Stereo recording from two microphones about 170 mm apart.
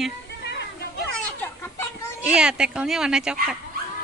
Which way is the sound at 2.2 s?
5° right (ahead or behind).